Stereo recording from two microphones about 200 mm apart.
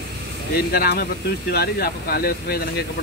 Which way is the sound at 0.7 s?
50° left (ahead or behind).